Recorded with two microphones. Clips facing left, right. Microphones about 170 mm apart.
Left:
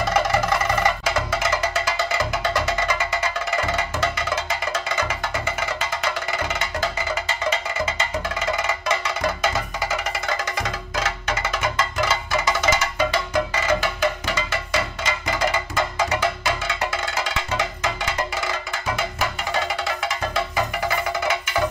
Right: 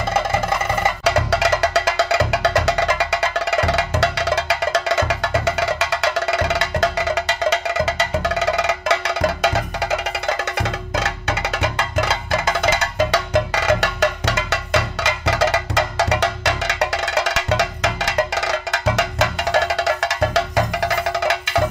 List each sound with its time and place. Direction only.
1.0 s music: 70° right (ahead or behind)
13.1 s music: 75° right (ahead or behind)